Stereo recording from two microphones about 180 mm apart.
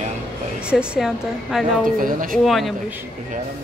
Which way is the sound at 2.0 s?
50° right (ahead or behind).